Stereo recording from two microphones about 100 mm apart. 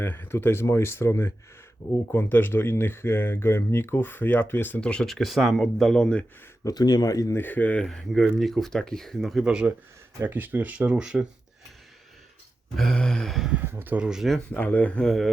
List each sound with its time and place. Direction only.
0.0 s speech: 20° left (ahead or behind)
6.7 s speech: 40° left (ahead or behind)
7.3 s speech: 20° left (ahead or behind); by 9.4 s 5° left (ahead or behind)
9.4 s speech: 10° right (ahead or behind)
12.7 s speech: 5° left (ahead or behind)
13.5 s speech: 20° right (ahead or behind); by 14.4 s centre (ahead or behind)
14.5 s speech: 15° left (ahead or behind)